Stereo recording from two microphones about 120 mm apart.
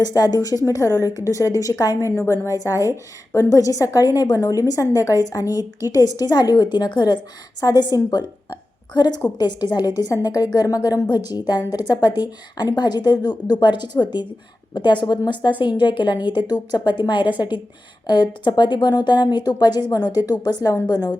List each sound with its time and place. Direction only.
0.0 s a woman's voice: 35° left (ahead or behind)